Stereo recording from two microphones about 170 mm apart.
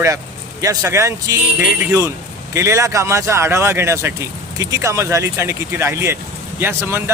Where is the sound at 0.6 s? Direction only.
20° right (ahead or behind).